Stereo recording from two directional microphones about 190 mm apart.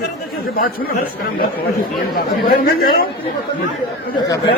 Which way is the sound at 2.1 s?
50° left (ahead or behind).